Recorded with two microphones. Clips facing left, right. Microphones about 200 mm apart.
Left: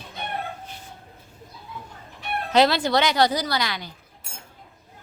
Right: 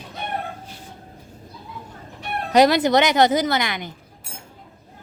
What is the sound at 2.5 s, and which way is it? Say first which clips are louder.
Speech: right 4 dB; 15° right (ahead or behind).